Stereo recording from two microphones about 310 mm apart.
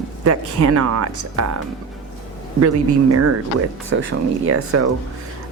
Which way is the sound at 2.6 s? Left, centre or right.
Right.